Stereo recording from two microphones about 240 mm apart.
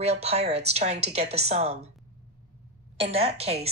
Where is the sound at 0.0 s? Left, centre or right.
Right.